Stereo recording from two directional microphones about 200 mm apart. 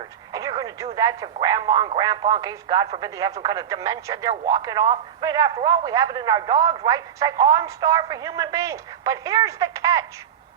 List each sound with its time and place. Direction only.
0.3 s radio: 15° right (ahead or behind)
0.9 s speech: 20° right (ahead or behind)